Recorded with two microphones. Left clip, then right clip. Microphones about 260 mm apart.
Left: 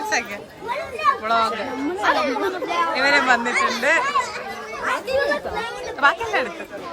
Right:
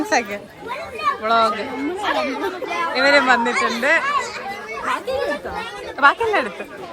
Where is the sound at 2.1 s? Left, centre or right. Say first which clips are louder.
Left 1 dB; left.